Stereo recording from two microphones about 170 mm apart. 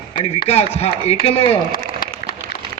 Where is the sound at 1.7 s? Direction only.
60° left (ahead or behind).